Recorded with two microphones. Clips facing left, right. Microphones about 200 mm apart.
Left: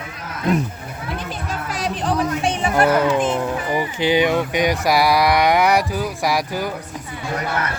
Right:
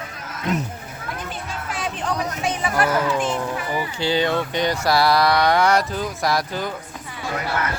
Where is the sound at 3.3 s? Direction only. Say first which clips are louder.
Left 4 dB; 15° left (ahead or behind).